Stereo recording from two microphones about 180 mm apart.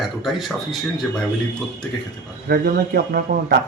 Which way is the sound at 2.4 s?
60° right (ahead or behind).